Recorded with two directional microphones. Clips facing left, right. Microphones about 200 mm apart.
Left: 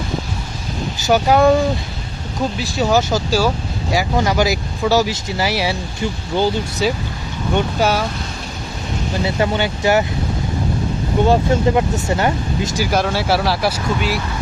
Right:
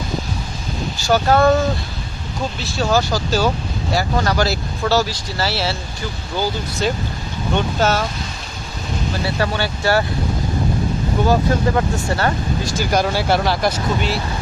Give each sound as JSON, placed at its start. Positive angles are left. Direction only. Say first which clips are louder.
{"t": 1.0, "sound": "speech", "louder": "left 2 dB", "side_deg": 15}
{"t": 2.7, "sound": "speech", "louder": "left 1 dB", "side_deg": 15}
{"t": 3.3, "sound": "speech", "louder": "left 1 dB", "side_deg": 10}
{"t": 6.8, "sound": "speech", "louder": "even", "side_deg": 5}
{"t": 9.2, "sound": "speech", "louder": "left 4 dB", "side_deg": 20}
{"t": 11.2, "sound": "speech", "louder": "left 2 dB", "side_deg": 15}
{"t": 12.9, "sound": "speech", "louder": "right 1 dB", "side_deg": 0}